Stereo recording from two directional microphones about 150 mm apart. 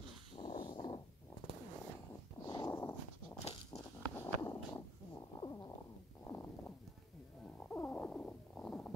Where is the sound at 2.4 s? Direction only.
20° left (ahead or behind).